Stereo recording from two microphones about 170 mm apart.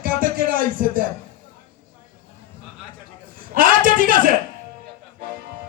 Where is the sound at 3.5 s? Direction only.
55° right (ahead or behind).